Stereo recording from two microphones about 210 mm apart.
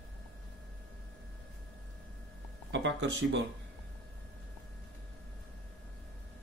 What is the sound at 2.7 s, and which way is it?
Speech, 60° right (ahead or behind).